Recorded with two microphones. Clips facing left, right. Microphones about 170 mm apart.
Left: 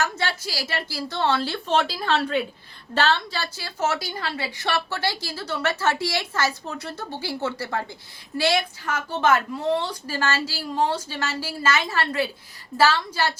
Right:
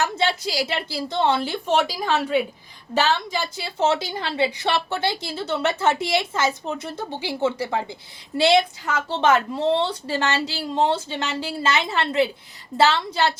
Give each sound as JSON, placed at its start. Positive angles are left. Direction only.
{"t": 0.0, "sound": "a woman's voice", "side_deg": -20}